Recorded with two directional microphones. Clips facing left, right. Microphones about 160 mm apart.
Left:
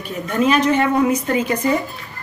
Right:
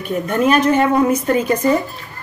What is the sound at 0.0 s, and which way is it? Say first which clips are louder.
A woman's voice: right 2 dB; 50° right (ahead or behind).